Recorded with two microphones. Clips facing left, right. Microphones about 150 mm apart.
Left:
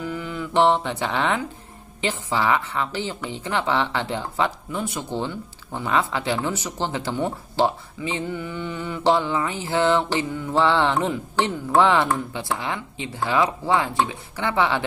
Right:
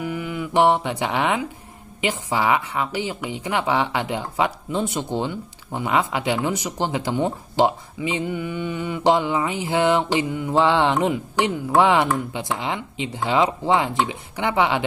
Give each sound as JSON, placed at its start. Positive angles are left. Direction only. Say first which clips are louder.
{"t": 0.0, "sound": "music", "louder": "right 2 dB", "side_deg": -15}
{"t": 2.0, "sound": "speech", "louder": "right 1 dB", "side_deg": -15}
{"t": 4.7, "sound": "speech", "louder": "right 5 dB", "side_deg": -25}